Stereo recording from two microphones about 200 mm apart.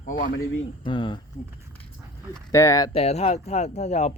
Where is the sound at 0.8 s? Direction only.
25° left (ahead or behind).